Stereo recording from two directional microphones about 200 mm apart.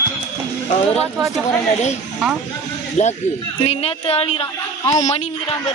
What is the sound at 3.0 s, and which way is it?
A man's voice, 35° left (ahead or behind).